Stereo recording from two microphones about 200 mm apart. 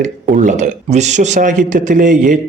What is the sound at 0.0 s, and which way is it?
Speech, 40° right (ahead or behind).